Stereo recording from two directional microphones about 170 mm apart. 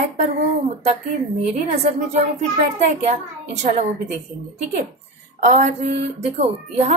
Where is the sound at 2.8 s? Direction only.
40° right (ahead or behind).